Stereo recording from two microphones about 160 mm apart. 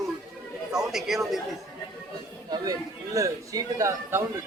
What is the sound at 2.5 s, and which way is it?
A man's voice, 20° right (ahead or behind).